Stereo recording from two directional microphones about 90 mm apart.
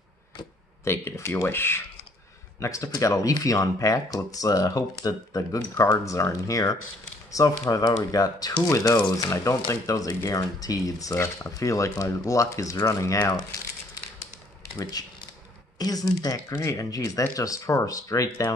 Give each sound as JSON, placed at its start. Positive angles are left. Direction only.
{"t": 0.8, "sound": "speech", "side_deg": 30}
{"t": 2.6, "sound": "speech", "side_deg": 35}
{"t": 14.8, "sound": "speech", "side_deg": 45}